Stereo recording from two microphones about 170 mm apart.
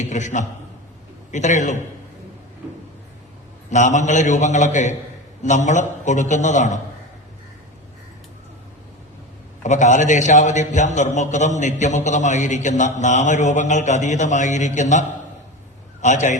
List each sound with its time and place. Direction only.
0.0 s a man's voice: 45° left (ahead or behind)
3.7 s a man's voice: 45° left (ahead or behind)
9.6 s a man's voice: 45° left (ahead or behind)